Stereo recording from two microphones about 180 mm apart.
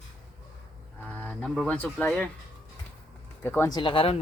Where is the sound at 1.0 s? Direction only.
10° left (ahead or behind).